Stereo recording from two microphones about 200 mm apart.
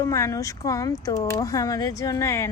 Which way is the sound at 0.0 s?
15° left (ahead or behind).